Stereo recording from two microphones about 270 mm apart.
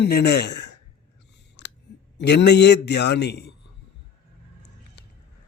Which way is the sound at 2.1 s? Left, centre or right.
Left.